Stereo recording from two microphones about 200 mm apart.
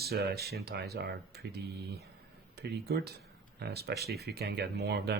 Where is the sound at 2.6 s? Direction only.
55° right (ahead or behind).